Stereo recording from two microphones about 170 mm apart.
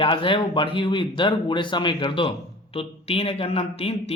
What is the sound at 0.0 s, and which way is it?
A man's voice, 30° left (ahead or behind).